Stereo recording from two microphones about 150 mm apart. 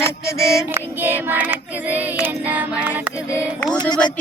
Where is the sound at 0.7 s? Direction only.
15° right (ahead or behind).